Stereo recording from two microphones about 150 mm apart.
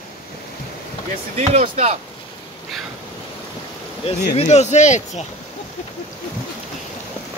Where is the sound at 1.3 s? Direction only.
50° right (ahead or behind).